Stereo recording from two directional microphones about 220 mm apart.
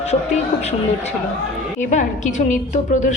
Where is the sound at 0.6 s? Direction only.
30° left (ahead or behind).